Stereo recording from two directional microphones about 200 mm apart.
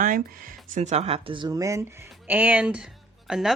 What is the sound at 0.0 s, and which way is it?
Speech, 40° right (ahead or behind).